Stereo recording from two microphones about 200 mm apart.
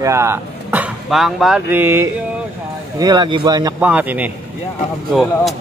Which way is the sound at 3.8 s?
10° right (ahead or behind).